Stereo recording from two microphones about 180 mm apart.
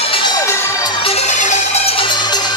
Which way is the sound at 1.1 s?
40° left (ahead or behind).